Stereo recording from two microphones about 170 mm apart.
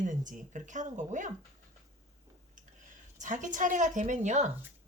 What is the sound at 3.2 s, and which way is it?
Speech, 45° right (ahead or behind).